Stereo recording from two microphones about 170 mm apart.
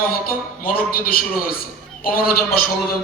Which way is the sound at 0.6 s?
60° left (ahead or behind).